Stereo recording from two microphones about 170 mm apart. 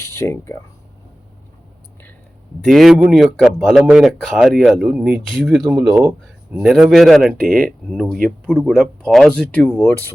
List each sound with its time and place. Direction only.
0.0 s speech: 15° left (ahead or behind)
2.6 s speech: centre (ahead or behind)
6.2 s speech: centre (ahead or behind)